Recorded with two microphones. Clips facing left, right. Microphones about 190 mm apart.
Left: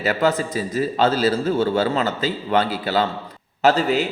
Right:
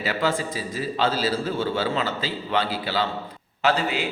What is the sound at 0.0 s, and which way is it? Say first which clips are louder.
A man's voice: left 5 dB; 45° left (ahead or behind).